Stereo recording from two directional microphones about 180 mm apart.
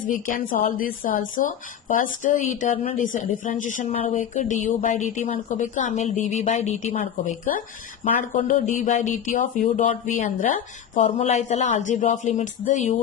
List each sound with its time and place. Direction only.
0.1 s speech: 50° left (ahead or behind)
11.0 s speech: 35° left (ahead or behind)